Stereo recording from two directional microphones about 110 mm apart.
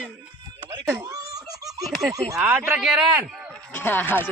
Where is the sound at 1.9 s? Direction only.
Centre (ahead or behind).